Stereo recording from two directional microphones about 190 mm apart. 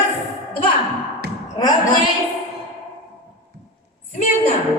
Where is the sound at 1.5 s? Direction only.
20° left (ahead or behind).